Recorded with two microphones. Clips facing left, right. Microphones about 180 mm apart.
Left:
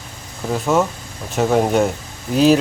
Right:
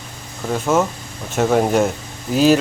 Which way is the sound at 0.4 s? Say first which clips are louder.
Even; centre (ahead or behind).